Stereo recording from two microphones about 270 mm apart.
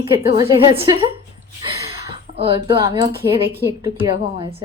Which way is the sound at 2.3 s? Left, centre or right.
Centre.